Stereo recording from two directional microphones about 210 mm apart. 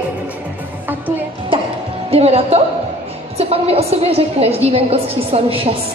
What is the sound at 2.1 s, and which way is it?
A woman's voice, 30° right (ahead or behind).